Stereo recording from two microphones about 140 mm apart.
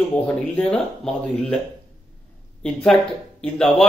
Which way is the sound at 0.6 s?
5° left (ahead or behind).